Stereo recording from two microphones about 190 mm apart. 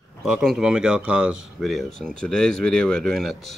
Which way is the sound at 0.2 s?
Centre (ahead or behind).